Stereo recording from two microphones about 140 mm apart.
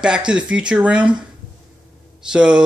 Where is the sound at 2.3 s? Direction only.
5° right (ahead or behind).